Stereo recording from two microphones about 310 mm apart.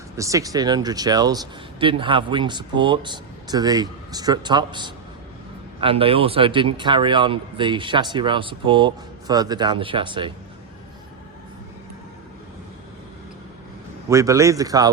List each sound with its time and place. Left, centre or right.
0.2 s speech: centre
14.1 s speech: centre